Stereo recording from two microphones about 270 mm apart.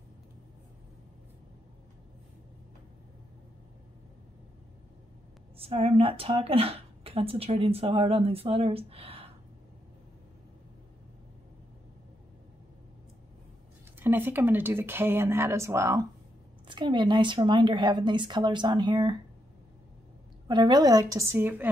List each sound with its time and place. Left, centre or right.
5.6 s speech: right
13.9 s a woman's voice: centre
20.4 s a woman's voice: centre